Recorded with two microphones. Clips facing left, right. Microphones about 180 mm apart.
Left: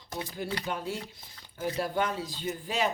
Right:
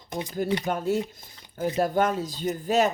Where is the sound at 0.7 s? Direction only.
45° right (ahead or behind).